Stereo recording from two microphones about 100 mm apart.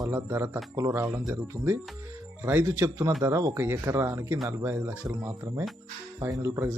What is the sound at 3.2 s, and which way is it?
Speech, 35° right (ahead or behind).